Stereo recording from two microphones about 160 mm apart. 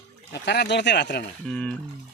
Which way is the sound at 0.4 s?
90° left.